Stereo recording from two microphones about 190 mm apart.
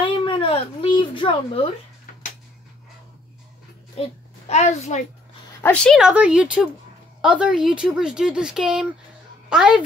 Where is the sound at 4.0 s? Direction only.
35° left (ahead or behind).